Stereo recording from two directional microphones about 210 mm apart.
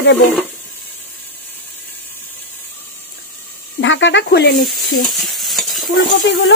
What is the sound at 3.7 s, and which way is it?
Speech, 60° left (ahead or behind).